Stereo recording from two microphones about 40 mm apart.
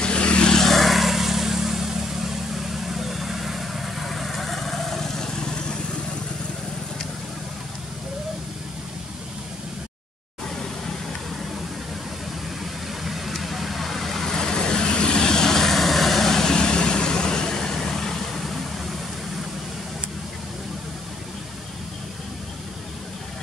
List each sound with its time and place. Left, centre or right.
0.0 s vehicle: left
0.6 s vehicle: centre
13.0 s vehicle: centre